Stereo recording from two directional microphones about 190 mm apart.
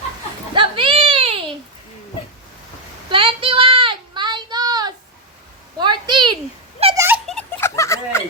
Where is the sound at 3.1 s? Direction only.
25° right (ahead or behind).